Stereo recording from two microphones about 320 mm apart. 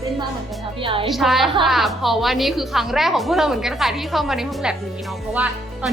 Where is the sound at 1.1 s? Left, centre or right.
Centre.